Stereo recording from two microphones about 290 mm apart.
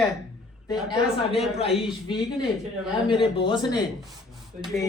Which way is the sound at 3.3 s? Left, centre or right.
Centre.